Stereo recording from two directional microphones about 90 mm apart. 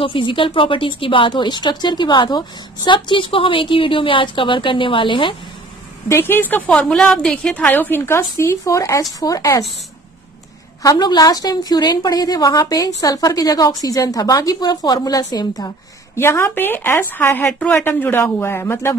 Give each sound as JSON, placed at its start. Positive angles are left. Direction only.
{"t": 0.0, "sound": "a woman's voice", "side_deg": 70}
{"t": 6.0, "sound": "speech", "side_deg": 25}
{"t": 6.7, "sound": "a woman's voice", "side_deg": 5}
{"t": 7.5, "sound": "speech", "side_deg": 20}
{"t": 10.8, "sound": "a woman's voice", "side_deg": 45}
{"t": 16.2, "sound": "speech", "side_deg": 25}